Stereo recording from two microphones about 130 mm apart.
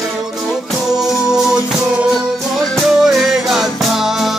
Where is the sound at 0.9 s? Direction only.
5° right (ahead or behind).